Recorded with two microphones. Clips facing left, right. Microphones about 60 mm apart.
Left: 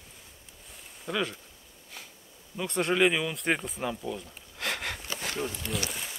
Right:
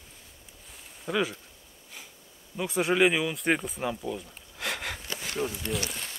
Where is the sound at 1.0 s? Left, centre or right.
Centre.